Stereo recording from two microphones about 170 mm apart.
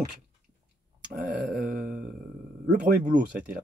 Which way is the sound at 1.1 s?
55° right (ahead or behind).